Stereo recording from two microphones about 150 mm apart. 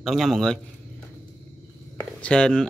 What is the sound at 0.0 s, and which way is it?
Speech, centre (ahead or behind).